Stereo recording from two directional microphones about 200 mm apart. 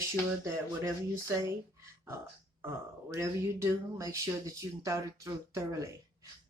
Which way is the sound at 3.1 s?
15° right (ahead or behind).